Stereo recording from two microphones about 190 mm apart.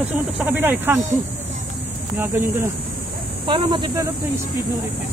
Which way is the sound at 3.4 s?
25° right (ahead or behind).